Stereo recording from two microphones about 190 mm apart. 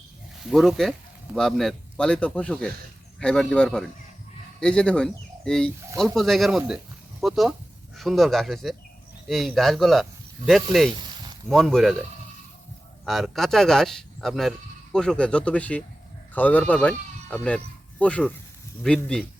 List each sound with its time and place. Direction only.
0.4 s speech: centre (ahead or behind)
10.9 s a sound: 25° right (ahead or behind)
11.4 s speech: centre (ahead or behind)
13.1 s speech: centre (ahead or behind)